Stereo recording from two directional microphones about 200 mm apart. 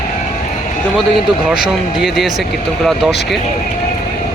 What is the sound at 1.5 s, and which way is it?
Speech, centre (ahead or behind).